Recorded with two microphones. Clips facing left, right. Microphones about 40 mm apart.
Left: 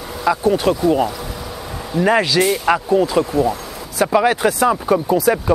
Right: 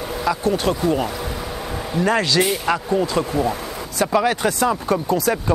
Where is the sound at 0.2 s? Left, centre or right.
Centre.